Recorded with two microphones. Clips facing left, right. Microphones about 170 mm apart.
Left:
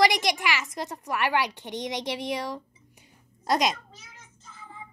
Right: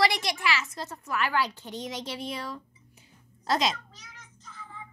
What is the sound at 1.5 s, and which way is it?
Speech, 75° left (ahead or behind).